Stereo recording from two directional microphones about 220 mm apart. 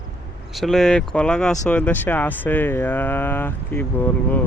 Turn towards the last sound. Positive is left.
turn(degrees=10)  # may be behind; listen again after turning